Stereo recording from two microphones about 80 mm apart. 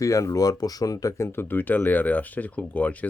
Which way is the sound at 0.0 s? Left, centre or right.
Left.